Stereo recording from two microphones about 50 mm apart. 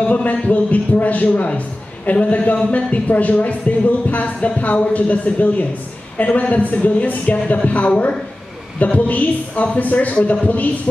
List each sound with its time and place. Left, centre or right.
0.0 s a man's voice: left